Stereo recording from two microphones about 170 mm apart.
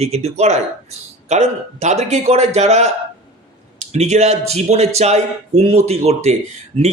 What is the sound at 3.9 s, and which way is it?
A man's voice, 40° right (ahead or behind).